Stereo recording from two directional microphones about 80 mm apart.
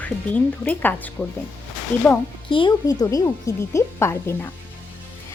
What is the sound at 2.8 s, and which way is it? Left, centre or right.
Speech, left.